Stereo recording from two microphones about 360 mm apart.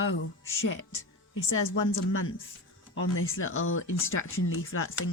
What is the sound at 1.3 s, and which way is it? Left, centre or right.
Speech, left.